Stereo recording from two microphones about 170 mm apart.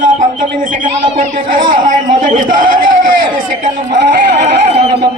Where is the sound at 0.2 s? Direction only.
50° right (ahead or behind).